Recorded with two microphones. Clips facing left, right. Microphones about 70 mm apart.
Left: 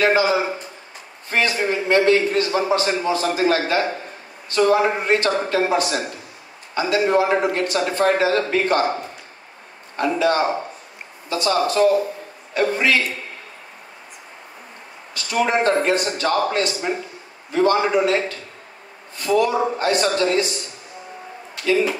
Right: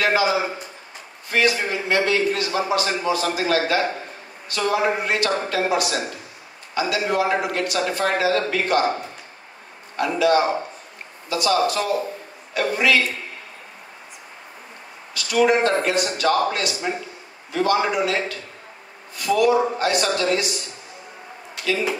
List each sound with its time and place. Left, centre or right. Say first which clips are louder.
0.0 s a man's voice: left 2 dB; left
9.9 s a man's voice: even; left
15.1 s a man's voice: right 2 dB; left